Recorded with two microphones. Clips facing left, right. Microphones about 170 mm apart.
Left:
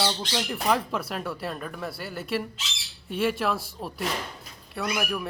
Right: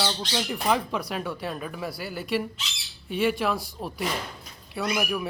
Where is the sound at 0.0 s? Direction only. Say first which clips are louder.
Even; centre (ahead or behind).